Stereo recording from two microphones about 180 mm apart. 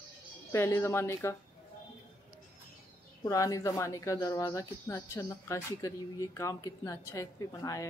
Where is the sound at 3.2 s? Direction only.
20° left (ahead or behind).